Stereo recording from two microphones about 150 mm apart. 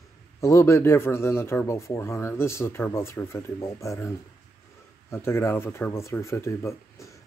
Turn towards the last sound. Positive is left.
turn(degrees=15)  # may be behind; listen again after turning